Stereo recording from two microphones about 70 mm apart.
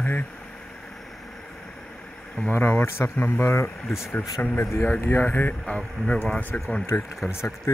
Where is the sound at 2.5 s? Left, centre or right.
Left.